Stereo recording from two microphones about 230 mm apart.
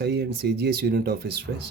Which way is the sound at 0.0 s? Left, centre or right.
Right.